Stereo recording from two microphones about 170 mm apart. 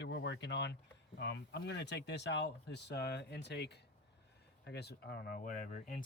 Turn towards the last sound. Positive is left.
turn(degrees=50)  # may be behind; listen again after turning